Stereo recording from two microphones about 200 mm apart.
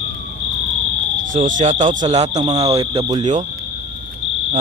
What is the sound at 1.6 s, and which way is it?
Speech, 35° right (ahead or behind).